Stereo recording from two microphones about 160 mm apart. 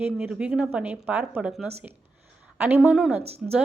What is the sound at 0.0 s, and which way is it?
Speech, 5° right (ahead or behind).